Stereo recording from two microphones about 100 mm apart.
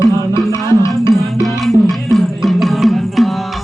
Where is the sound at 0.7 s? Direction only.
30° left (ahead or behind).